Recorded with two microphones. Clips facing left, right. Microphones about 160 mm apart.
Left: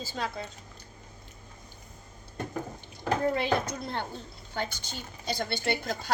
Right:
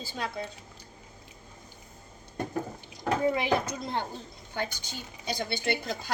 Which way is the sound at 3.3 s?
15° right (ahead or behind).